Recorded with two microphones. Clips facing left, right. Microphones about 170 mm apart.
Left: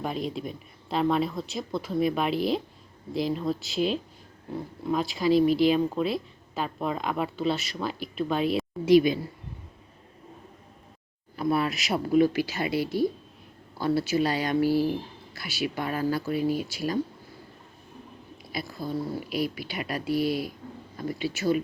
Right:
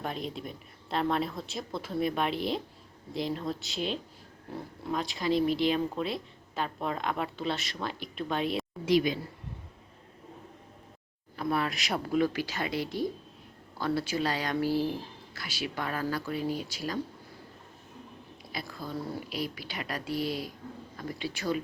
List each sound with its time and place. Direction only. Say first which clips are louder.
0.0 s a woman's voice: left 5 dB; 5° left (ahead or behind)
11.3 s speech: left 4 dB; 10° left (ahead or behind)
18.5 s speech: left 6 dB; 10° left (ahead or behind)